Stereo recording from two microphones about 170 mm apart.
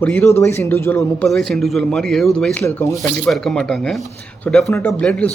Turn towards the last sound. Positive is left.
turn(degrees=5)  # may be behind; listen again after turning